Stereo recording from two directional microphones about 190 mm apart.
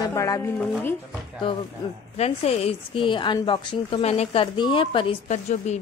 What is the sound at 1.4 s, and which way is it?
A woman's voice, 25° left (ahead or behind).